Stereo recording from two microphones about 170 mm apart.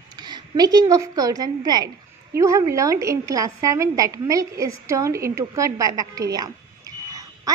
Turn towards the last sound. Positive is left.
turn(degrees=-20)  # may be behind; listen again after turning